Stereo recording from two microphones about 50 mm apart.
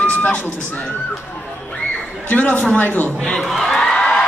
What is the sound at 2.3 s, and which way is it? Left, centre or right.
Speech, left.